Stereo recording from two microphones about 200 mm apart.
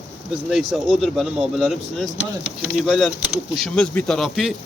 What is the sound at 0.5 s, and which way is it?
Speech, centre (ahead or behind).